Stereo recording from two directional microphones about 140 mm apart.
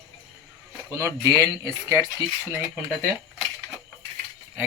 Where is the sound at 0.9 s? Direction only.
20° right (ahead or behind).